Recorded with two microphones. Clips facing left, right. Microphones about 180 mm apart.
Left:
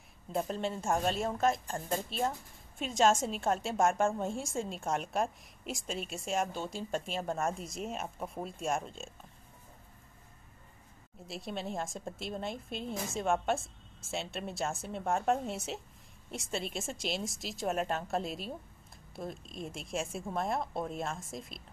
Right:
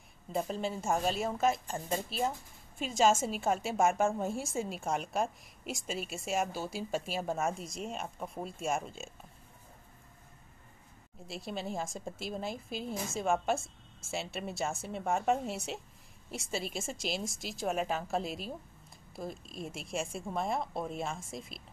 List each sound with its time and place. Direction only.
0.3 s a woman's voice: centre (ahead or behind)
11.2 s a woman's voice: centre (ahead or behind)